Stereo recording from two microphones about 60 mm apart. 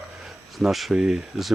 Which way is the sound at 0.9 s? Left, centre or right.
Centre.